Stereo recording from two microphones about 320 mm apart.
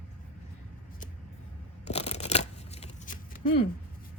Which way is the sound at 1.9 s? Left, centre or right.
Centre.